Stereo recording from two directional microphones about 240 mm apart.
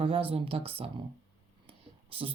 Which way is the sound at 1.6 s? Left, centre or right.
Right.